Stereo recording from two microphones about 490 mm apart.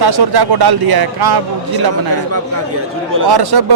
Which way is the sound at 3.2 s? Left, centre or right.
Right.